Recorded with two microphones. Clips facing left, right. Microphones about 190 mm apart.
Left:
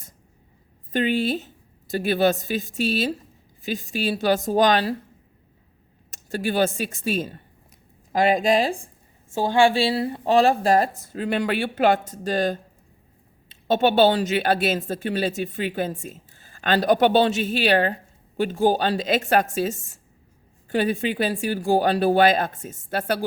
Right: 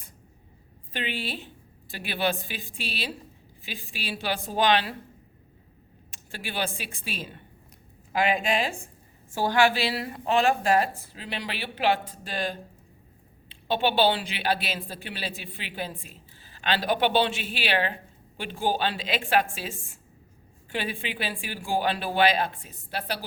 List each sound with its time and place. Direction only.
0.9 s a woman's voice: 45° left (ahead or behind)
6.1 s a woman's voice: 40° left (ahead or behind)
9.3 s a woman's voice: 25° left (ahead or behind); by 23.2 s 50° left (ahead or behind)